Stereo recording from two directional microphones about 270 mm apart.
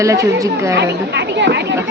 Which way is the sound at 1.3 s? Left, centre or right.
Right.